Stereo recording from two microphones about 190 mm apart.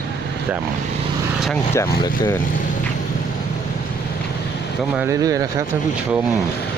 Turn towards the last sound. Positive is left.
turn(degrees=-20)  # may be behind; listen again after turning